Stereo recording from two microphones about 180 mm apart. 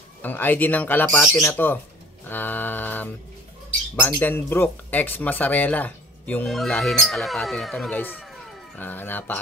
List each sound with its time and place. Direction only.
0.2 s speech: 10° left (ahead or behind)
4.2 s speech: 10° left (ahead or behind)
8.2 s a sound: centre (ahead or behind)